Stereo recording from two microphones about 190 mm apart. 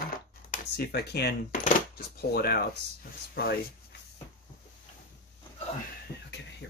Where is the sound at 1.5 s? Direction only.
50° left (ahead or behind).